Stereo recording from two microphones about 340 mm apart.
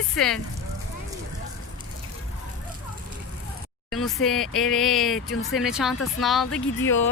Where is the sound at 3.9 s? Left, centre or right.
Centre.